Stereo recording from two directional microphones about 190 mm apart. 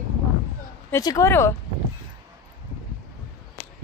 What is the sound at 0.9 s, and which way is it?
Speech, 15° left (ahead or behind).